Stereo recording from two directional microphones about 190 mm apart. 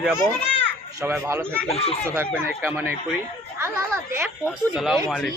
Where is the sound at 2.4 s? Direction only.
10° right (ahead or behind).